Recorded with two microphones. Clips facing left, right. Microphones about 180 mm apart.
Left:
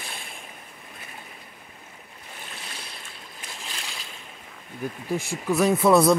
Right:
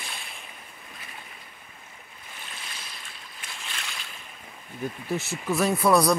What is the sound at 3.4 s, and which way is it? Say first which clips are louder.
Boat: left 1 dB; 35° left (ahead or behind).